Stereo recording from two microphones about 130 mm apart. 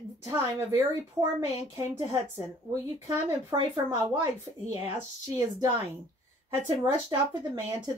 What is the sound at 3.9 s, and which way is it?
Speech, 20° right (ahead or behind).